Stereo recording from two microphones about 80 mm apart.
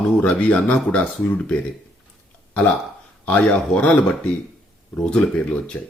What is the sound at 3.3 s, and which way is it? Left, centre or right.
Speech, centre.